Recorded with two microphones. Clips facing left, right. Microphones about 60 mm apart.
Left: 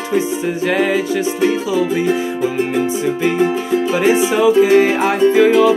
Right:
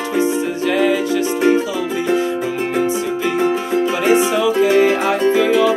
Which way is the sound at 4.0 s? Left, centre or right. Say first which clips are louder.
Left 2 dB; centre.